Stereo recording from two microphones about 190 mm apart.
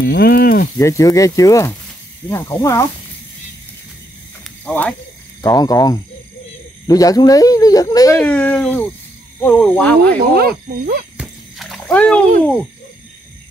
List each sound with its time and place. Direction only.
0.0 s speech: 60° left (ahead or behind)
0.7 s speech: 15° left (ahead or behind)
4.6 s speech: 5° left (ahead or behind)
5.4 s speech: 20° left (ahead or behind)
8.2 s speech: 5° left (ahead or behind)
10.3 s speech: 50° right (ahead or behind)
11.1 s a sound: centre (ahead or behind)